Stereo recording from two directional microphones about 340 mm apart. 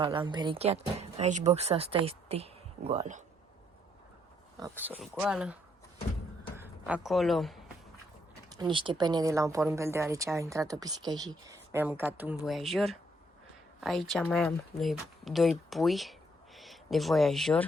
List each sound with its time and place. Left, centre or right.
0.0 s speech: centre
4.6 s speech: centre
6.6 s speech: centre
8.4 s speech: centre